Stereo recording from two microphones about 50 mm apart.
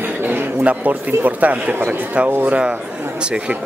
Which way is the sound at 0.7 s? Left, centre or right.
Right.